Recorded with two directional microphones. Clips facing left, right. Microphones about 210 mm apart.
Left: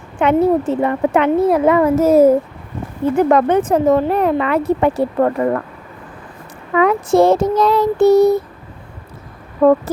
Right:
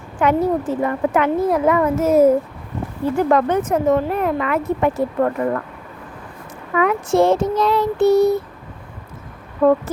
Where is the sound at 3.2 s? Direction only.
20° left (ahead or behind).